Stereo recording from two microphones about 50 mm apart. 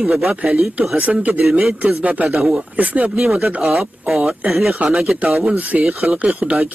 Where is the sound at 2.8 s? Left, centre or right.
Right.